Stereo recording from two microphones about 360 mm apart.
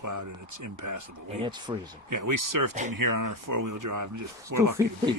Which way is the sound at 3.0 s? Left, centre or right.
Right.